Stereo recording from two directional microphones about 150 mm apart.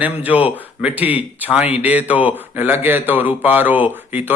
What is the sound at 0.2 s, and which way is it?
A man's voice, 10° right (ahead or behind).